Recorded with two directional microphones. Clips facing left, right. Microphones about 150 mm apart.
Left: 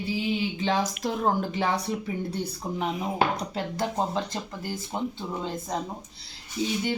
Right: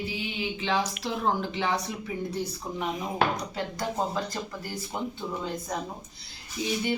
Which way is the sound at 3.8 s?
25° left (ahead or behind).